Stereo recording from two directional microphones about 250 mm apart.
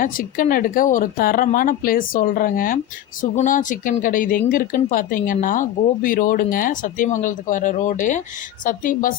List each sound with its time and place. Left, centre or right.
0.0 s speech: left